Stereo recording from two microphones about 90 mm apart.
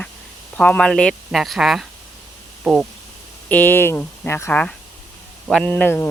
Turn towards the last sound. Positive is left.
turn(degrees=20)  # may be behind; listen again after turning